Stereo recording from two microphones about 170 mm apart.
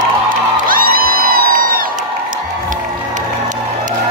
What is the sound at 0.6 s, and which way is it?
Music, 55° right (ahead or behind).